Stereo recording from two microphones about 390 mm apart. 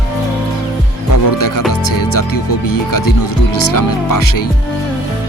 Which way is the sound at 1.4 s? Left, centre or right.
Left.